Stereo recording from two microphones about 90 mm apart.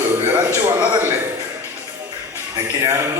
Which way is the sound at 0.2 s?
25° right (ahead or behind).